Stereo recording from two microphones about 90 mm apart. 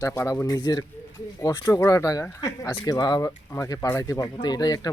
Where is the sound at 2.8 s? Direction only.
50° left (ahead or behind).